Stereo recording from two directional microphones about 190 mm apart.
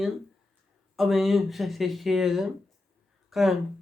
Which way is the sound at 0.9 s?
Centre (ahead or behind).